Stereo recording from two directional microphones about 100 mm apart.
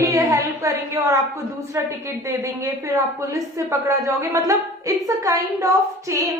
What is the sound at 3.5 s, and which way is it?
A woman's voice, 30° right (ahead or behind).